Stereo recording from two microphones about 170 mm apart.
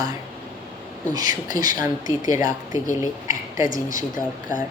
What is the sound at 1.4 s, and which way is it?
Speech, 50° left (ahead or behind).